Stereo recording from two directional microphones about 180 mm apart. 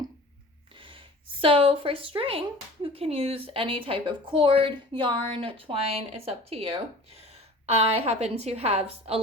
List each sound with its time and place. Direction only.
0.8 s a woman's voice: 30° right (ahead or behind)